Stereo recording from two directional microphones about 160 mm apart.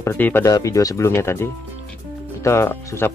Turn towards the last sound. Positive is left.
turn(degrees=15)  # may be behind; listen again after turning